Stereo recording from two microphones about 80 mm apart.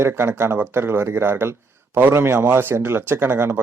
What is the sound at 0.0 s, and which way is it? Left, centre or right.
A man's voice, right.